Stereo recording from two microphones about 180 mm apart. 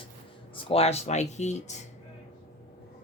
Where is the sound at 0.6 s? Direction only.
35° left (ahead or behind).